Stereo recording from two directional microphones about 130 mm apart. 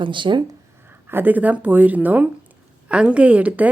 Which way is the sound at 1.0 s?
15° right (ahead or behind).